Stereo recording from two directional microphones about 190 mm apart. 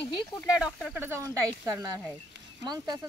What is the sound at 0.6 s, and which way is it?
Speech, centre (ahead or behind).